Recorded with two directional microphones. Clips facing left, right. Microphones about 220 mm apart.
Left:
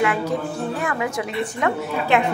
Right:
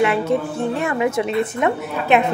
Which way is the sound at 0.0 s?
25° right (ahead or behind).